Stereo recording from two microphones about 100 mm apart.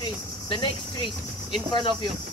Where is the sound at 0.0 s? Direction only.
50° left (ahead or behind).